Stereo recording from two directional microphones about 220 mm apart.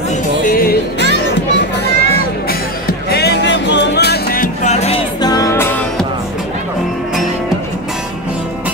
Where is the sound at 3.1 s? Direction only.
50° left (ahead or behind); by 5.0 s 30° left (ahead or behind).